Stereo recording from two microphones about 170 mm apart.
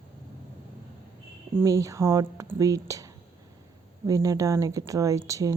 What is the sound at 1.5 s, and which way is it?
Speech, 20° right (ahead or behind).